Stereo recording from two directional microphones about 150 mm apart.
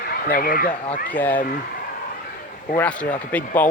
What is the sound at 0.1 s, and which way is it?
Speech, 80° left.